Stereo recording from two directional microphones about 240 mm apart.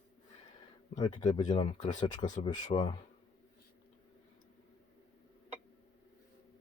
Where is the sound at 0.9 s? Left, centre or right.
Centre.